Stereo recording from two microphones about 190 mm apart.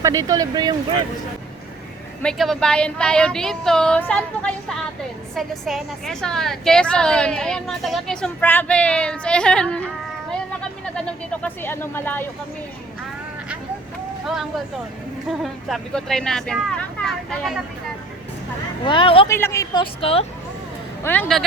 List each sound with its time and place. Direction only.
0.0 s speech: 15° right (ahead or behind)
2.2 s a woman's voice: 5° left (ahead or behind)
10.9 s speech: 5° left (ahead or behind)
15.3 s a woman's voice: centre (ahead or behind)
18.9 s speech: 25° left (ahead or behind)
19.3 s a woman's voice: 15° left (ahead or behind)
19.8 s speech: 30° left (ahead or behind)
21.0 s a woman's voice: 10° left (ahead or behind)